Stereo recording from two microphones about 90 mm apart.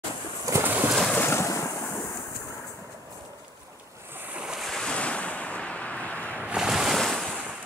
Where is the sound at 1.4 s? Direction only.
35° left (ahead or behind).